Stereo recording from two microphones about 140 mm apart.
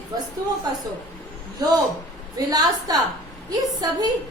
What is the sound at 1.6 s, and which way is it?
A woman's voice, 30° right (ahead or behind).